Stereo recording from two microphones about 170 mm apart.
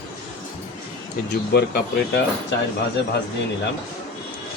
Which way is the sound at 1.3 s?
70° left (ahead or behind).